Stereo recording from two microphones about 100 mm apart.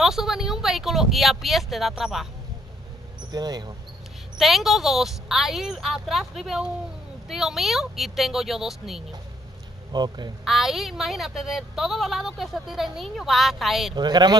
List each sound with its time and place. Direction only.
0.0 s a woman's voice: 5° right (ahead or behind)
3.3 s speech: 45° right (ahead or behind)
4.4 s a woman's voice: centre (ahead or behind)
9.9 s speech: 45° right (ahead or behind)
10.4 s a woman's voice: centre (ahead or behind)
13.9 s speech: 45° right (ahead or behind)